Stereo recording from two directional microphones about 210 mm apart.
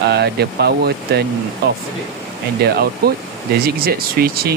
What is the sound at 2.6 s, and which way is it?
Speech, 50° right (ahead or behind).